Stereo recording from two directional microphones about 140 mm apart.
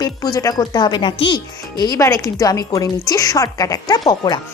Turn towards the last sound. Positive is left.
turn(degrees=30)  # may be behind; listen again after turning